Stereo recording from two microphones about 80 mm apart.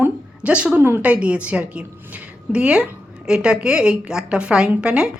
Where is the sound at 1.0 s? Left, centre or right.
Centre.